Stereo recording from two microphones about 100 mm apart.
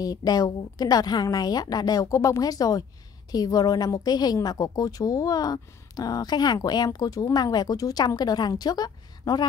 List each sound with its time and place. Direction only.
0.0 s a woman's voice: 40° left (ahead or behind)